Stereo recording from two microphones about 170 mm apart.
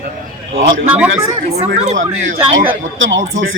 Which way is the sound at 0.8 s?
10° right (ahead or behind).